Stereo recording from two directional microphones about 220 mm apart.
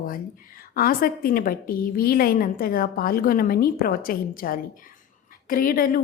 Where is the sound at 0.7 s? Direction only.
40° left (ahead or behind).